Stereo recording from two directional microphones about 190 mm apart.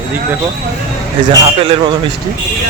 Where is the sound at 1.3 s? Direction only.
25° right (ahead or behind).